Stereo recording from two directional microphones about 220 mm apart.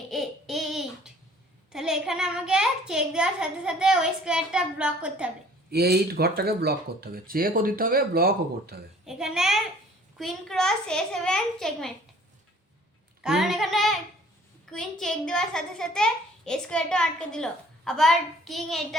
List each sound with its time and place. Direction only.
0.1 s a sound: centre (ahead or behind)
1.7 s a child's voice: centre (ahead or behind)
5.7 s speech: 45° right (ahead or behind)
9.0 s a child's voice: centre (ahead or behind)
13.2 s a child's voice: centre (ahead or behind)